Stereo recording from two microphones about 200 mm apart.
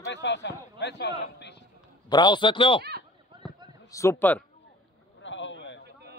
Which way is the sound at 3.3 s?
25° right (ahead or behind).